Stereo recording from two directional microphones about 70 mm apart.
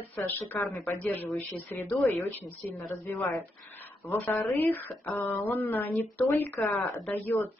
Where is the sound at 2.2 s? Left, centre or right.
Left.